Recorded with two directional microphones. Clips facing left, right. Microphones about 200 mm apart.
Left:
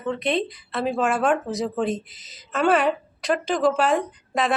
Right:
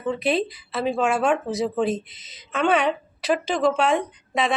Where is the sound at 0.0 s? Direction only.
5° right (ahead or behind).